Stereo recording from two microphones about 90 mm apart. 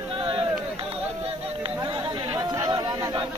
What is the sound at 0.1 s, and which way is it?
Run, 90° right.